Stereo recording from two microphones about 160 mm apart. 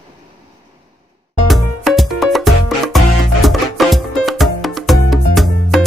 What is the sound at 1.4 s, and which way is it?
Music, centre (ahead or behind).